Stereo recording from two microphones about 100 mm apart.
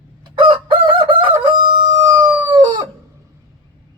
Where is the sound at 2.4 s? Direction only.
50° right (ahead or behind).